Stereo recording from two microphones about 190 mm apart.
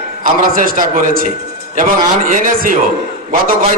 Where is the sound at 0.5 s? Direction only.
45° right (ahead or behind).